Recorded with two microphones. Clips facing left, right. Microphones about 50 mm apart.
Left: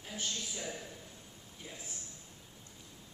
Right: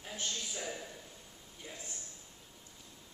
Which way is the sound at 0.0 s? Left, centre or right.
Centre.